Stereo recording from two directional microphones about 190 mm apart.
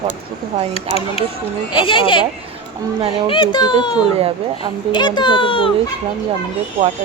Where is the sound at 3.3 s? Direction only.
25° left (ahead or behind).